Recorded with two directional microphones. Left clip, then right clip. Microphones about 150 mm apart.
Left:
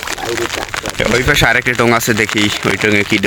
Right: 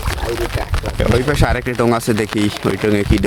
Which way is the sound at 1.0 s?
10° right (ahead or behind).